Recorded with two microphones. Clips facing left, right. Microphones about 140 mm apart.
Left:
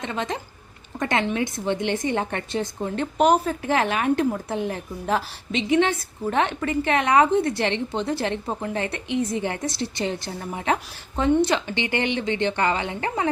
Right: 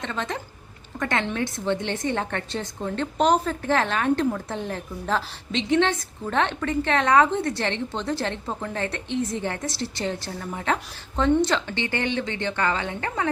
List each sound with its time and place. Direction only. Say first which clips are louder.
0.0 s a woman's voice: left 2 dB; 15° left (ahead or behind)